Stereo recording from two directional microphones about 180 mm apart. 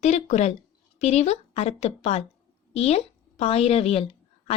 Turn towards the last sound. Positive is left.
turn(degrees=35)  # may be behind; listen again after turning